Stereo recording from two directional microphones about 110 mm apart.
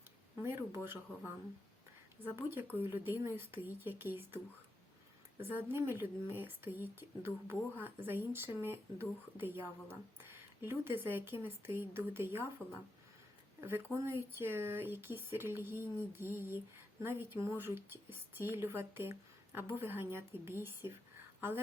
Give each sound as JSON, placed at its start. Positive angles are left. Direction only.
{"t": 0.4, "sound": "a sound", "side_deg": -20}
{"t": 2.3, "sound": "speech", "side_deg": -20}
{"t": 5.4, "sound": "speech", "side_deg": -20}
{"t": 13.6, "sound": "speech", "side_deg": -20}